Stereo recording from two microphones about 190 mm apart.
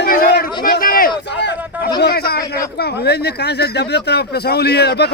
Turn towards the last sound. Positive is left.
turn(degrees=60)  # may be behind; listen again after turning